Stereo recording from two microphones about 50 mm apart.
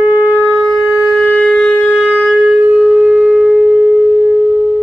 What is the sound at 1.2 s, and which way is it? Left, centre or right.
Wind instrument, centre.